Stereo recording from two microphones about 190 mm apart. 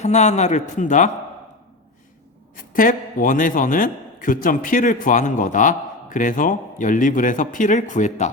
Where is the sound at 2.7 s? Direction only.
45° left (ahead or behind).